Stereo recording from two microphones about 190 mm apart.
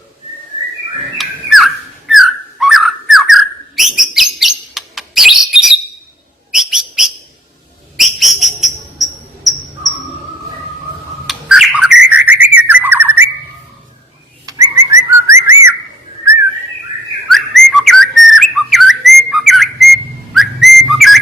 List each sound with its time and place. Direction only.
1.2 s a sound: centre (ahead or behind)
6.5 s bird: centre (ahead or behind)
7.9 s whistle: centre (ahead or behind)
11.3 s bird: centre (ahead or behind)
14.4 s whistling: 15° right (ahead or behind)
17.2 s whistling: centre (ahead or behind)